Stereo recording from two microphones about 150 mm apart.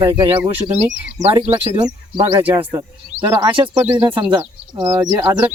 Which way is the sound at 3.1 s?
15° right (ahead or behind).